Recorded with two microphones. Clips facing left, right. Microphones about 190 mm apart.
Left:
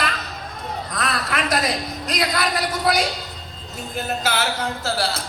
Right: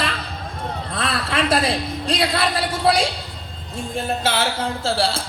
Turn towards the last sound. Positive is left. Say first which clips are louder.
# right 3 dB
turn(degrees=-30)  # may be behind; listen again after turning